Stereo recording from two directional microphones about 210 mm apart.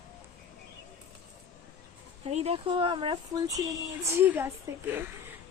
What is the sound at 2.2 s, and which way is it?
Speech, 30° right (ahead or behind).